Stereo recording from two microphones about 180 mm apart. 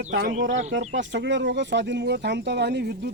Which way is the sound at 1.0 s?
85° right.